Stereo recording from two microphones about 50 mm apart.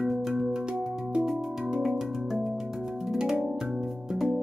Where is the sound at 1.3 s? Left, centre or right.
Centre.